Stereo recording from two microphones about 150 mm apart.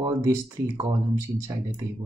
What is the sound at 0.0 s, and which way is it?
Speech, 20° right (ahead or behind).